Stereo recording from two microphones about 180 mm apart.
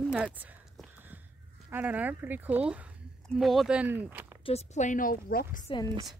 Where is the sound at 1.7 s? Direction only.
10° right (ahead or behind).